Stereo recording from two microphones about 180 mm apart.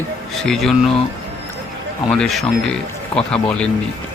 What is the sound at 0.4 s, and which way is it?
Speech, centre (ahead or behind).